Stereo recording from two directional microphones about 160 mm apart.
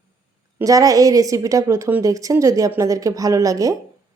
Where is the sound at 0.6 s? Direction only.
20° right (ahead or behind).